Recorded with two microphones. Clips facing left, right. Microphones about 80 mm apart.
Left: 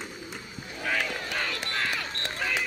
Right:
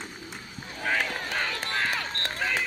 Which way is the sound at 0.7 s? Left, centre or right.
Right.